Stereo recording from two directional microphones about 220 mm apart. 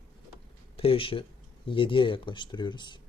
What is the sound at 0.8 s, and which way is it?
Speech, 25° left (ahead or behind).